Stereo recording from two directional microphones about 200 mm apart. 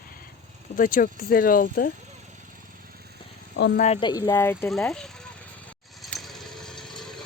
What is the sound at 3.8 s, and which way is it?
Speech, 30° left (ahead or behind).